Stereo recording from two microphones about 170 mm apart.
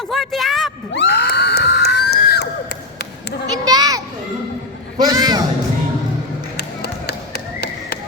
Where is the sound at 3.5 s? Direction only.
25° right (ahead or behind).